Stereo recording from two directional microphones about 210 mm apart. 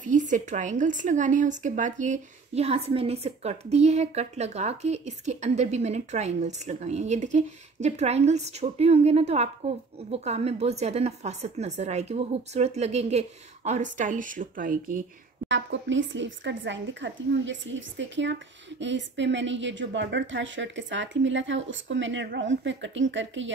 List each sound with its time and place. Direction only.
0.0 s a woman's voice: 35° right (ahead or behind)
15.4 s a woman's voice: 60° right (ahead or behind)